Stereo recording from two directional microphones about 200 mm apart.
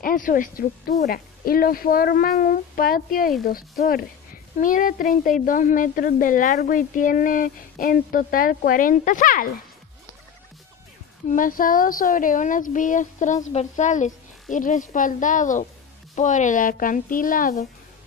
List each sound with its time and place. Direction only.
0.0 s a woman's voice: 40° left (ahead or behind)
11.2 s a woman's voice: 40° left (ahead or behind)